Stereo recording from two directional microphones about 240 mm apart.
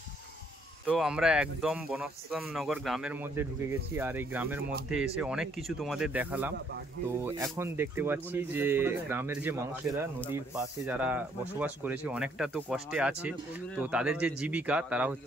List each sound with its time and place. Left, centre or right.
0.8 s speech: centre
7.5 s speech: centre